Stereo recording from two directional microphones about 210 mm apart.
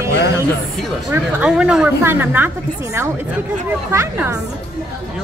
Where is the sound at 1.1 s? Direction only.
5° right (ahead or behind).